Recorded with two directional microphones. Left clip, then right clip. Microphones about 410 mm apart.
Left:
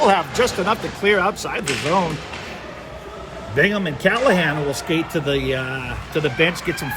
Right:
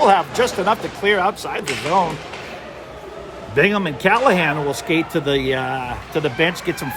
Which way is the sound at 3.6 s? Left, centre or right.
Centre.